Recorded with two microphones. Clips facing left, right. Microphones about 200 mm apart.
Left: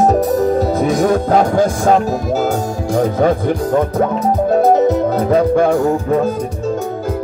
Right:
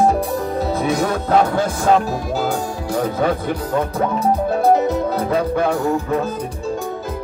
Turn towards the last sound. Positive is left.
turn(degrees=50)  # may be behind; listen again after turning